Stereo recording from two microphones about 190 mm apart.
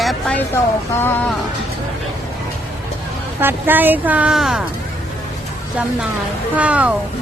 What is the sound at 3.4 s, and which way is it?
Speech, 10° right (ahead or behind).